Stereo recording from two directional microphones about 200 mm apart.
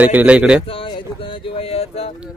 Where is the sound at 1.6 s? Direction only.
30° left (ahead or behind).